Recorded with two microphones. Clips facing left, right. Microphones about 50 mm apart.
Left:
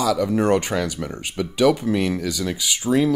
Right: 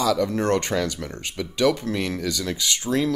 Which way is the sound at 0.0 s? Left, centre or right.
Centre.